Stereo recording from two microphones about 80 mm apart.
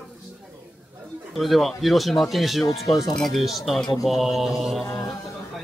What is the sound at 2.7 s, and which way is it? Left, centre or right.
Speech, left.